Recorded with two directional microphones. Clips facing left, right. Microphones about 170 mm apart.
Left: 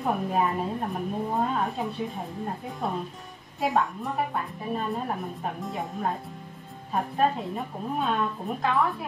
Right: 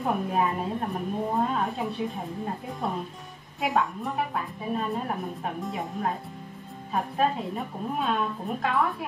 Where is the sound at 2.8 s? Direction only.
Centre (ahead or behind).